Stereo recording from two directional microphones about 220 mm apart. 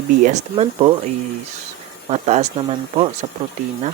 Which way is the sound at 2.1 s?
30° right (ahead or behind).